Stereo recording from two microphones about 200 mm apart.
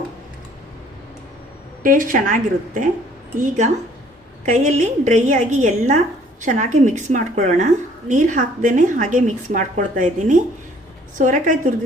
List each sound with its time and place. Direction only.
1.8 s a woman's voice: 40° right (ahead or behind)